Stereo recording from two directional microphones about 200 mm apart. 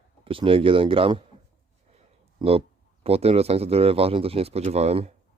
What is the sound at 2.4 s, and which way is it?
A man's voice, 30° right (ahead or behind).